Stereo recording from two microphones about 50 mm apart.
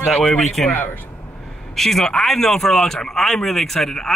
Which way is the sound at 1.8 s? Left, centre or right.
Centre.